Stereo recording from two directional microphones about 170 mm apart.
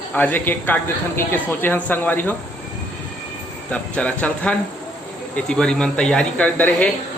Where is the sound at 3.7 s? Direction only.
10° left (ahead or behind).